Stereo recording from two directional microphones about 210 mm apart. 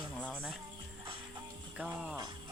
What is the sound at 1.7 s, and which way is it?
Speech, 5° right (ahead or behind).